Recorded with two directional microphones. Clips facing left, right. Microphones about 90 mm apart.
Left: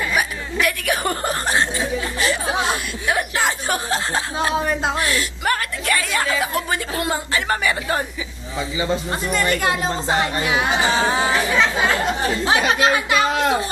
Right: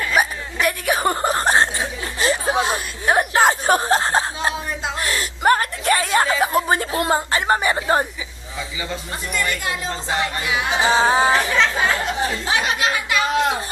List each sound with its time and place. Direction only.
0.1 s chuckle: 30° right (ahead or behind)
3.1 s a sound: 40° right (ahead or behind)
9.3 s speech: 40° left (ahead or behind)
10.9 s a sound: 30° right (ahead or behind)
11.3 s speech: centre (ahead or behind)
12.4 s speech: 35° left (ahead or behind)